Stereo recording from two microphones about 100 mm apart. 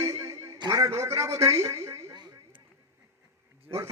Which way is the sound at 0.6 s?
35° right (ahead or behind).